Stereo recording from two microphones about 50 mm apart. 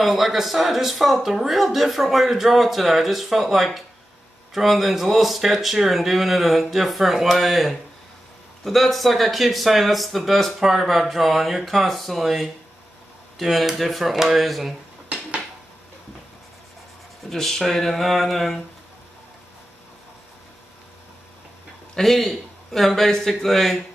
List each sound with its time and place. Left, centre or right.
0.0 s speech: centre
17.3 s speech: centre
21.9 s speech: centre